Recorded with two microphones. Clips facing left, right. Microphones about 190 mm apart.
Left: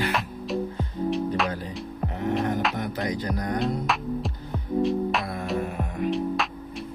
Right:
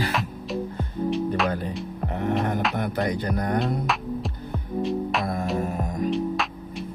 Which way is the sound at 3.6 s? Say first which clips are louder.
Even; centre (ahead or behind).